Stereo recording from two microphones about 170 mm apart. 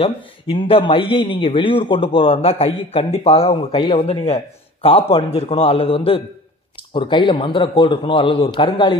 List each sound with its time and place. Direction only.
0.0 s a man's voice: 30° left (ahead or behind)